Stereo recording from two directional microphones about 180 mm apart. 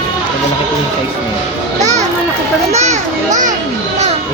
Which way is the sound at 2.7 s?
40° right (ahead or behind).